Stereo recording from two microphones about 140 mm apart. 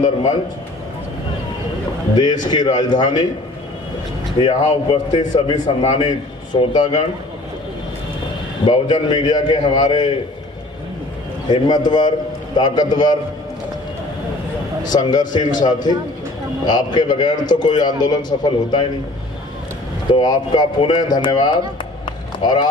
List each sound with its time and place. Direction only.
2.4 s a man's voice: 30° left (ahead or behind)
4.4 s a man's voice: 40° left (ahead or behind)
8.6 s a man's voice: 30° left (ahead or behind)
11.4 s a man's voice: 30° left (ahead or behind)
14.8 s a man's voice: 30° left (ahead or behind)
20.1 s a man's voice: 30° left (ahead or behind)
22.0 s a sound: 30° left (ahead or behind)